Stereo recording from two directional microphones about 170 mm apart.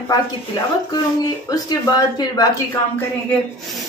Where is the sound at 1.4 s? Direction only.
25° left (ahead or behind).